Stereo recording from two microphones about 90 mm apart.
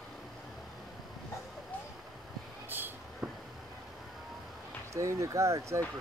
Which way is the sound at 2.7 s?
20° right (ahead or behind).